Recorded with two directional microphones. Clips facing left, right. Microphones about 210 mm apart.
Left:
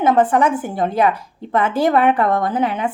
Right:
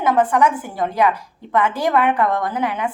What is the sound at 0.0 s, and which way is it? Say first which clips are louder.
A woman's voice: left 2 dB; 25° left (ahead or behind).